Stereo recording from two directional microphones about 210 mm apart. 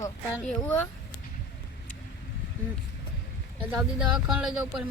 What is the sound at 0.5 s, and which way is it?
Speech, 10° left (ahead or behind).